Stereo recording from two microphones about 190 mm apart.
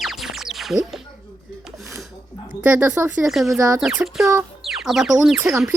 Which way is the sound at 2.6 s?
10° right (ahead or behind).